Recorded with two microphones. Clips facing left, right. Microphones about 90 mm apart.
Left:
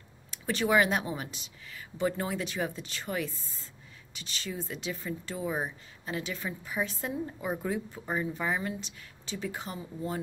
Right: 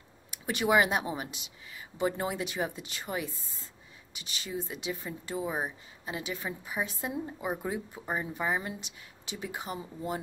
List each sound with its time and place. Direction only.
0.3 s speech: 15° right (ahead or behind)